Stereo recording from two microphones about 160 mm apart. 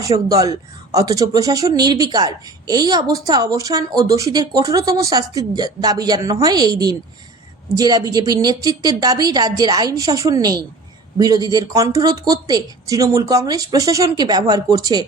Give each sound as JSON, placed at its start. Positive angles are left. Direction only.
{"t": 0.0, "sound": "speech", "side_deg": -20}